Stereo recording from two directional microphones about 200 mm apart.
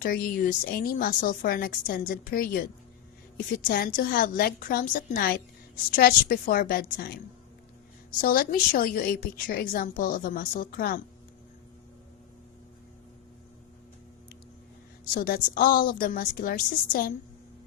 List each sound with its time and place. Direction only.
0.0 s a woman's voice: 50° left (ahead or behind)
3.7 s a woman's voice: 45° left (ahead or behind)
8.2 s a woman's voice: 45° left (ahead or behind)
15.1 s a woman's voice: 45° left (ahead or behind)